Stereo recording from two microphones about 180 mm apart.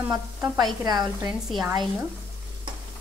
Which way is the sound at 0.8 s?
20° right (ahead or behind).